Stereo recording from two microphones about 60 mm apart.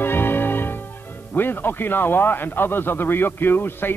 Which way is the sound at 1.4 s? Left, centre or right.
Left.